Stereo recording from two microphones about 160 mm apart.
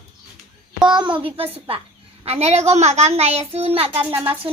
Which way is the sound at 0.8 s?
30° right (ahead or behind).